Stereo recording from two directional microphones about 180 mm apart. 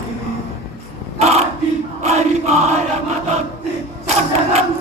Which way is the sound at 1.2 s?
35° right (ahead or behind).